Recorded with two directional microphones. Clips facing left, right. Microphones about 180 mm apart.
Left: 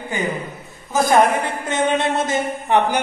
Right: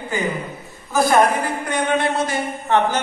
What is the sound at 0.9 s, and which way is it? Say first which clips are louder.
A woman's voice: left 1 dB; 20° left (ahead or behind).